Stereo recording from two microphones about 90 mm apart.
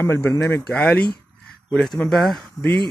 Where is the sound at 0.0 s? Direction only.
25° left (ahead or behind).